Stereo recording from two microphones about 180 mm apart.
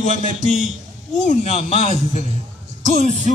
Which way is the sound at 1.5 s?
35° left (ahead or behind).